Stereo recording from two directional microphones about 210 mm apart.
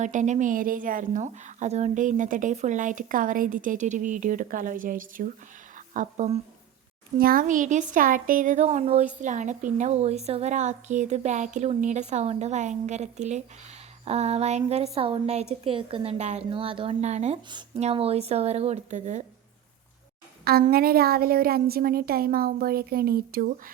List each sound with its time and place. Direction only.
0.0 s speech: 35° right (ahead or behind)
7.2 s speech: 45° right (ahead or behind)
14.0 s a sound: 30° right (ahead or behind)
16.5 s speech: 25° right (ahead or behind)
20.4 s a woman's voice: 45° right (ahead or behind)